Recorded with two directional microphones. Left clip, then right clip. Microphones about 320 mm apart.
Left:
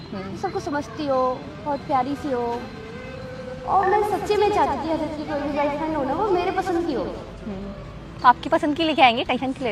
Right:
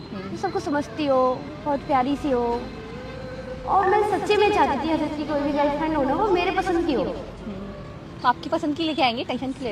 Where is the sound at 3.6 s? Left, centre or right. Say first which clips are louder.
Even; right.